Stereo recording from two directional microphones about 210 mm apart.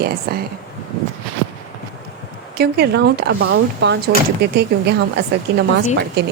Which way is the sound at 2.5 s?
50° right (ahead or behind).